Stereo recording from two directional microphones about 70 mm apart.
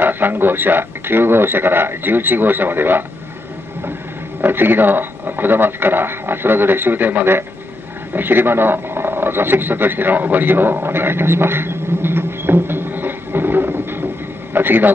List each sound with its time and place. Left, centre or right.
0.0 s a man's voice: right
4.4 s a man's voice: right
14.5 s a sound: right